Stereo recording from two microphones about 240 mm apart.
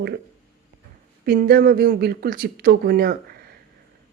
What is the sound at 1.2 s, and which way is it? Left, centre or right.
Speech, right.